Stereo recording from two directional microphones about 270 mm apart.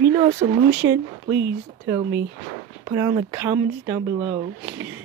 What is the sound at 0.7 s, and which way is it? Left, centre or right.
Speech, centre.